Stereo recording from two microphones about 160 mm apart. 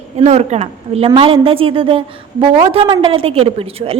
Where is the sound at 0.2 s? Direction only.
40° right (ahead or behind).